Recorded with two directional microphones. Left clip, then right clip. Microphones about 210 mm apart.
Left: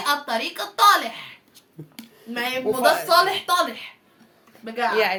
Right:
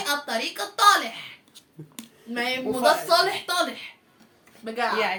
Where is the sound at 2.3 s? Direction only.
30° left (ahead or behind).